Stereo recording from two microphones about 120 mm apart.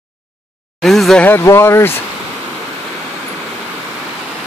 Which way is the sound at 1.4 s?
25° left (ahead or behind).